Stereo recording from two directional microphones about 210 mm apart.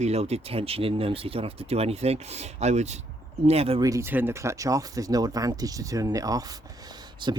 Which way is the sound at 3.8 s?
15° right (ahead or behind).